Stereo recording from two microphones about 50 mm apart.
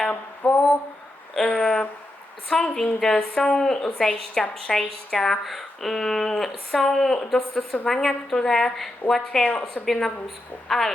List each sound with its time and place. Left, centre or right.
0.1 s mantra: left
1.5 s a woman's voice: centre
9.4 s a woman's voice: left
9.8 s a woman's voice: centre